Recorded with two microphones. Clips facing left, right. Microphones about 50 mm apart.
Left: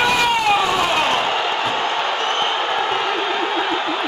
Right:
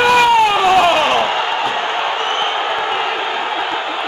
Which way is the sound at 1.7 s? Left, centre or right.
Right.